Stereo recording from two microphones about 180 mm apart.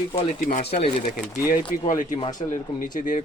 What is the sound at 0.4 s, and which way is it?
Speech, 45° left (ahead or behind).